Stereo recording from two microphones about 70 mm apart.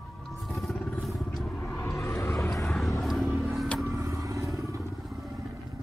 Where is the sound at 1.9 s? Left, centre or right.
Left.